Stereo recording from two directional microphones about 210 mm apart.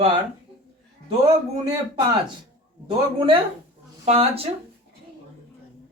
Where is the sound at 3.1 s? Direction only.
25° right (ahead or behind).